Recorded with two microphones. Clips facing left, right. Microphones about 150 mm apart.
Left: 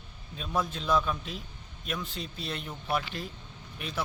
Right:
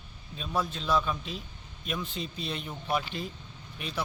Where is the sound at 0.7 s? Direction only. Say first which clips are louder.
Left 1 dB; 10° left (ahead or behind).